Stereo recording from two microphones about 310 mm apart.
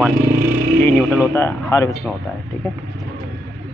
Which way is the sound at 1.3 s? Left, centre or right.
Centre.